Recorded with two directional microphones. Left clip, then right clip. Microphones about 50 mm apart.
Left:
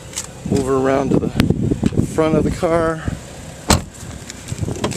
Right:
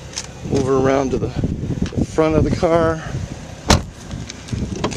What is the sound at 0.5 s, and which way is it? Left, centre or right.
Speech, right.